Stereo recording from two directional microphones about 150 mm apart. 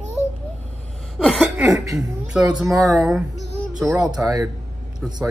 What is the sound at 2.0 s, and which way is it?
Speech, 5° right (ahead or behind).